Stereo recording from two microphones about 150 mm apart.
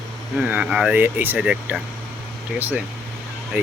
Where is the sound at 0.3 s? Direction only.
10° right (ahead or behind).